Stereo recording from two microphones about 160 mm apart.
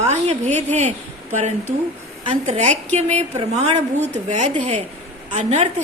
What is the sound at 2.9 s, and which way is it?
A woman's voice, 45° right (ahead or behind).